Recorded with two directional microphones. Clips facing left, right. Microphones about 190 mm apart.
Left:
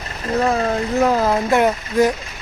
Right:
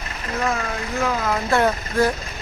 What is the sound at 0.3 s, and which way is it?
Speech, 35° left (ahead or behind).